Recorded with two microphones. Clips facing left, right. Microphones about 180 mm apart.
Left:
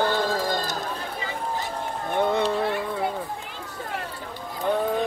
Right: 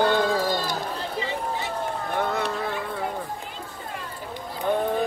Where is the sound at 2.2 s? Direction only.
20° left (ahead or behind).